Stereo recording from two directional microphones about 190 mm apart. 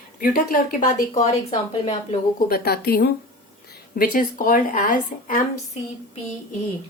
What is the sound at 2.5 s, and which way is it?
A woman's voice, 55° left (ahead or behind).